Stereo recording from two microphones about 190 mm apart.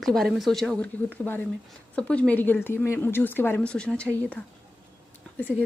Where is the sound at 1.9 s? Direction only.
5° left (ahead or behind).